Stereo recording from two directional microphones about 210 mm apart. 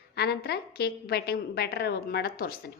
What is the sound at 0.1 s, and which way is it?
A woman's voice, 50° left (ahead or behind).